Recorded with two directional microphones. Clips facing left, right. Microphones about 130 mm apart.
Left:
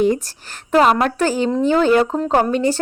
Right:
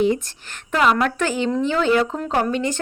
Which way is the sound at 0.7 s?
35° left (ahead or behind).